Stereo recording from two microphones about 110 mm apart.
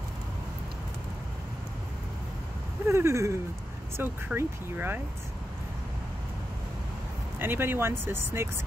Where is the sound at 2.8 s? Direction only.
25° right (ahead or behind).